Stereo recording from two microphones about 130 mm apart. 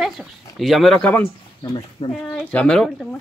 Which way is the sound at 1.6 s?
35° left (ahead or behind).